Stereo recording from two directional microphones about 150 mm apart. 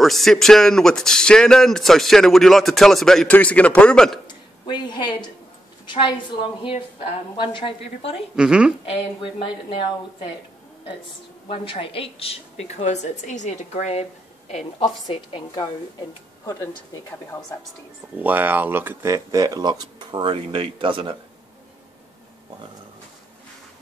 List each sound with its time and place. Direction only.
0.0 s speech: centre (ahead or behind)
4.6 s a woman's voice: 30° left (ahead or behind)
8.4 s speech: 5° right (ahead or behind)
8.8 s a woman's voice: 35° left (ahead or behind)
11.4 s a woman's voice: 35° left (ahead or behind)
15.0 s a woman's voice: 25° left (ahead or behind)
18.1 s speech: 10° right (ahead or behind); by 21.2 s 35° right (ahead or behind)